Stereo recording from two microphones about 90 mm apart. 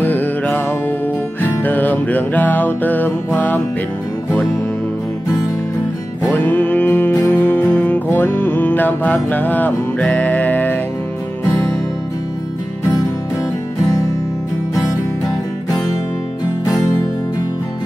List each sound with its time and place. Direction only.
0.0 s music: 20° left (ahead or behind)
6.2 s music: 15° left (ahead or behind)
13.8 s music: 40° left (ahead or behind)
15.2 s music: 45° left (ahead or behind)